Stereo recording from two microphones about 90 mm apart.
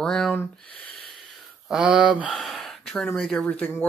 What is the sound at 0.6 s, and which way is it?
Speech, 15° left (ahead or behind).